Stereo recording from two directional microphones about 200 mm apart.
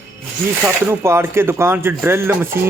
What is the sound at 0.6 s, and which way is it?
Speech, 10° right (ahead or behind).